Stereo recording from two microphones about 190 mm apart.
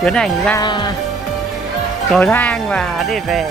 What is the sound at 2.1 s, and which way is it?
Speech, 5° left (ahead or behind).